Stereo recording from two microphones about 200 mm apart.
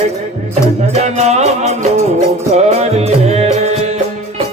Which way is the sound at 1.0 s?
35° right (ahead or behind).